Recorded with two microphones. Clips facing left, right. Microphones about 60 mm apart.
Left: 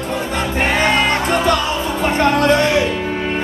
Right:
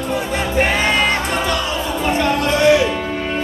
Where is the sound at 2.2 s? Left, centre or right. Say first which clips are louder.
Left 6 dB; left.